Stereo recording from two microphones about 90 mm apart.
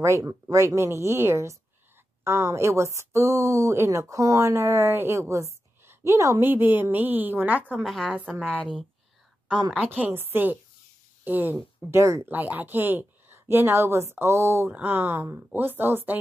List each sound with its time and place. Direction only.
0.0 s a woman's voice: 35° right (ahead or behind)
6.4 s speech: 20° right (ahead or behind)
7.8 s a woman's voice: 5° left (ahead or behind)
9.8 s speech: 20° right (ahead or behind)
12.3 s speech: 20° right (ahead or behind)
14.7 s speech: 20° right (ahead or behind)